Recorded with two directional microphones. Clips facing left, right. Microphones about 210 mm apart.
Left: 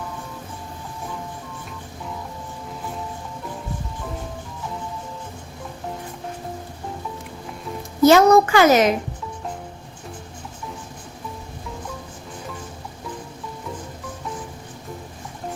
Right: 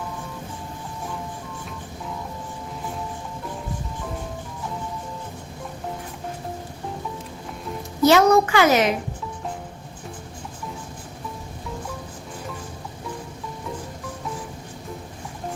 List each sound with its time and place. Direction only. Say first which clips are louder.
8.0 s a child's voice: left 3 dB; 45° left (ahead or behind)